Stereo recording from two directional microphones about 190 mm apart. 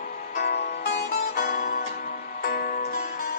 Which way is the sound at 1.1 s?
45° left (ahead or behind).